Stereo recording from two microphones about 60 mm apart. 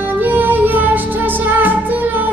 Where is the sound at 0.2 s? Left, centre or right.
Right.